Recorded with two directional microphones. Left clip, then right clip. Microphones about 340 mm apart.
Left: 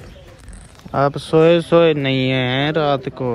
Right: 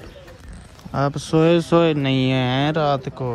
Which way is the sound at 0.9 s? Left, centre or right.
Centre.